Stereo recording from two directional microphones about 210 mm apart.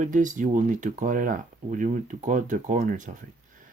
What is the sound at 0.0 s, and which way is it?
Speech, 40° right (ahead or behind).